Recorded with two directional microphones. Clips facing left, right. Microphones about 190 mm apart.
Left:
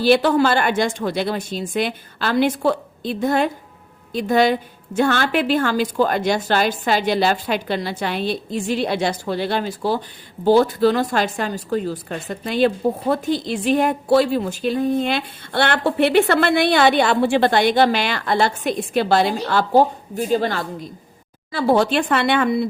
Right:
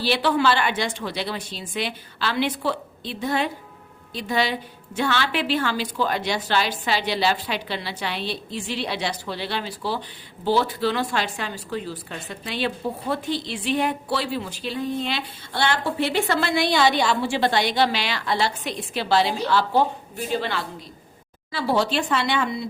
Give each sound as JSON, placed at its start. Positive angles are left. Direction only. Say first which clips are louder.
{"t": 0.0, "sound": "speech", "louder": "left 6 dB", "side_deg": 45}